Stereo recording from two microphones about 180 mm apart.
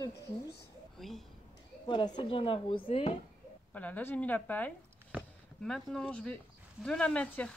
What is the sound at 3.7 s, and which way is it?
Speech, 10° left (ahead or behind).